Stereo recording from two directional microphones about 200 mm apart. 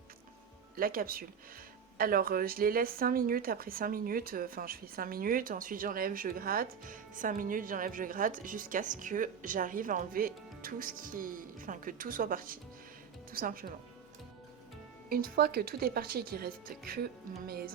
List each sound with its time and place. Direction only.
0.8 s speech: 45° right (ahead or behind)
15.1 s speech: 50° right (ahead or behind)